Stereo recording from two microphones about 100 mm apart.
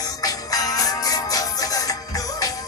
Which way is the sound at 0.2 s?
40° left (ahead or behind).